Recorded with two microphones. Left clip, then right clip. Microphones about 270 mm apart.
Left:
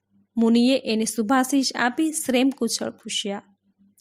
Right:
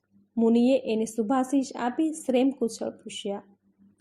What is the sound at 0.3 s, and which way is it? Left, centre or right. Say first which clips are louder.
A woman's voice: left 2 dB; left.